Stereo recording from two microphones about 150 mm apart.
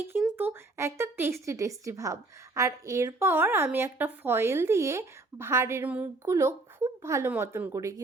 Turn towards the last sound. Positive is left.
turn(degrees=-20)  # may be behind; listen again after turning